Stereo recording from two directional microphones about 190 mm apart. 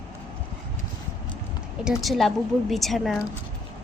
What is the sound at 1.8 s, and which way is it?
A woman's voice, centre (ahead or behind).